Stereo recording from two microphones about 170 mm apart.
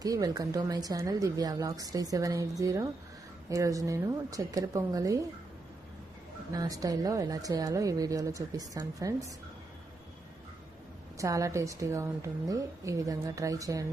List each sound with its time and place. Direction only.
0.0 s a woman's voice: 20° right (ahead or behind)
6.5 s a woman's voice: 20° right (ahead or behind)
11.2 s a woman's voice: 20° right (ahead or behind)